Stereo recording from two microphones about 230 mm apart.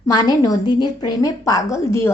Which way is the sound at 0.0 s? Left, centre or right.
Centre.